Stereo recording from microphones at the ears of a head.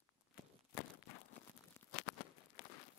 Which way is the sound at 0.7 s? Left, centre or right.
Left.